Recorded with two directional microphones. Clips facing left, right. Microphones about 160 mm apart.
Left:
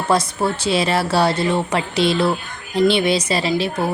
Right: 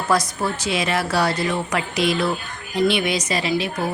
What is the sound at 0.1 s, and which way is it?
A woman's voice, 30° left (ahead or behind).